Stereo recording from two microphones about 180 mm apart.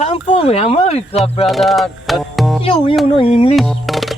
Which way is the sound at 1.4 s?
Centre (ahead or behind).